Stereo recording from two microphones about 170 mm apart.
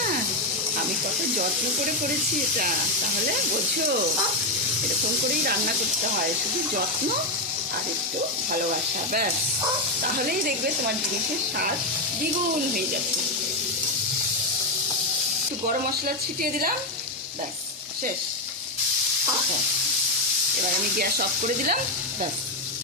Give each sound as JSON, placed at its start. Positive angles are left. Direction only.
{"t": 10.0, "sound": "speech", "side_deg": -60}
{"t": 15.6, "sound": "speech", "side_deg": -55}
{"t": 21.0, "sound": "speech", "side_deg": -60}